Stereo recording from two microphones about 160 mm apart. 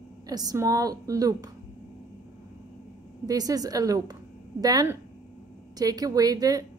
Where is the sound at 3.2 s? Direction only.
25° right (ahead or behind).